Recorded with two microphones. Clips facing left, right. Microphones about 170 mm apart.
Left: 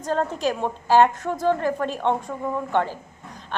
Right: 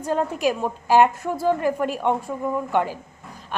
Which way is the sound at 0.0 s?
10° right (ahead or behind).